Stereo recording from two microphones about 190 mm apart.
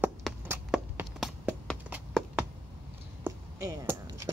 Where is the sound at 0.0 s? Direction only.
5° right (ahead or behind).